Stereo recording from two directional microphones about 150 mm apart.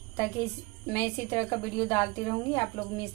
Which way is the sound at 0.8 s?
15° left (ahead or behind).